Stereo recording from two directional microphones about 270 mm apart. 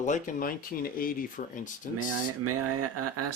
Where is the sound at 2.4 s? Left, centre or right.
Right.